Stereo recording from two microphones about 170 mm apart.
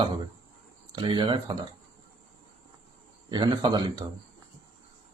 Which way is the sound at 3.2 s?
25° right (ahead or behind).